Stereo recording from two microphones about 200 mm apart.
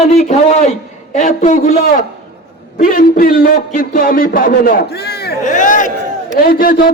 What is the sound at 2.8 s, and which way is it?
A man's voice, 45° left (ahead or behind).